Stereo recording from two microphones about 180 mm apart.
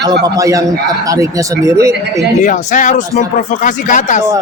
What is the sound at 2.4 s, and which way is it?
Speech, 45° left (ahead or behind).